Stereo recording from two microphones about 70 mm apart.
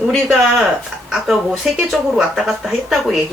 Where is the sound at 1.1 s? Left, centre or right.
Centre.